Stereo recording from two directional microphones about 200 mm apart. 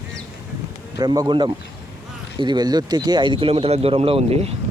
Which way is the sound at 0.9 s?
20° right (ahead or behind).